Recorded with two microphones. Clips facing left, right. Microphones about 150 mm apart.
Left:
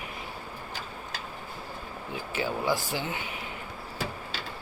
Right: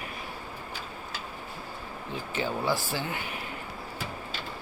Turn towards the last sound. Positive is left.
turn(degrees=20)  # may be behind; listen again after turning